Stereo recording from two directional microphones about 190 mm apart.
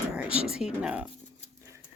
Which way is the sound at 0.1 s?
5° right (ahead or behind).